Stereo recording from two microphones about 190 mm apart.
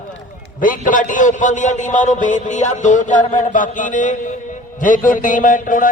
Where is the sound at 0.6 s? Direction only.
45° left (ahead or behind).